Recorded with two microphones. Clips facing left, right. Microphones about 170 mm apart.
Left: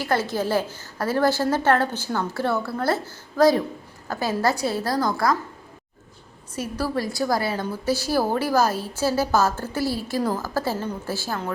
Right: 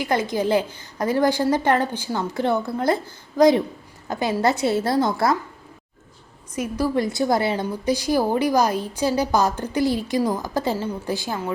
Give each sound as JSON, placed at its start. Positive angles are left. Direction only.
{"t": 0.0, "sound": "a woman's voice", "side_deg": -15}
{"t": 6.6, "sound": "a woman's voice", "side_deg": -15}